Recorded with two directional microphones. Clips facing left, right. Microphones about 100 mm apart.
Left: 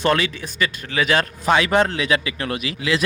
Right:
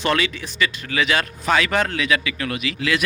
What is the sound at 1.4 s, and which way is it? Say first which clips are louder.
A man's voice: left 3 dB; 20° left (ahead or behind).